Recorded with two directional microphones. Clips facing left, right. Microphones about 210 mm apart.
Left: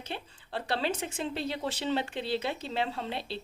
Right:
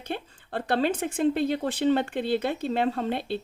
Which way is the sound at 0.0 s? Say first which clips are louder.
Right 6 dB; 50° right (ahead or behind).